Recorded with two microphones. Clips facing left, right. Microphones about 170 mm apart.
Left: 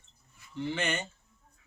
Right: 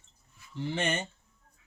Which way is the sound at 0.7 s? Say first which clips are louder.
Right 2 dB; 30° right (ahead or behind).